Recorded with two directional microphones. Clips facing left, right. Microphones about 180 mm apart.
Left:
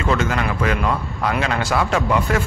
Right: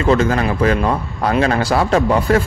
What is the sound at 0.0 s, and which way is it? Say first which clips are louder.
A man's voice: right 6 dB; 35° right (ahead or behind).